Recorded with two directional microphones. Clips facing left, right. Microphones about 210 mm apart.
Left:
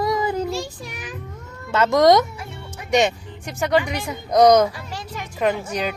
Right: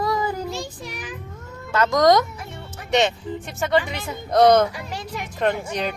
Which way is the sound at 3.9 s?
15° left (ahead or behind).